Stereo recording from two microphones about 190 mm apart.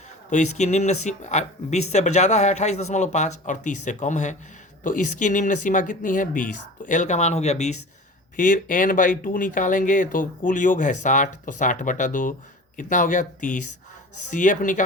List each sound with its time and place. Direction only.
0.3 s speech: 40° left (ahead or behind)